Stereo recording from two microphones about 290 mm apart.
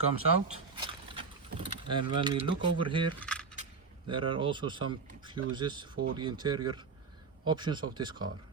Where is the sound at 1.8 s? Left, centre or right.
Centre.